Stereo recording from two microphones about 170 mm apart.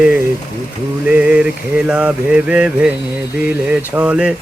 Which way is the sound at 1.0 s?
5° right (ahead or behind).